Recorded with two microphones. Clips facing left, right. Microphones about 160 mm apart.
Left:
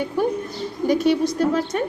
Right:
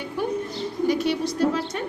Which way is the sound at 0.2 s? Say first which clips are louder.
Left 2 dB; 45° left (ahead or behind).